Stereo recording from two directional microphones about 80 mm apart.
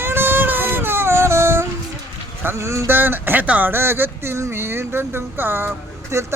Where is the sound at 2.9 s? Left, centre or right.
Right.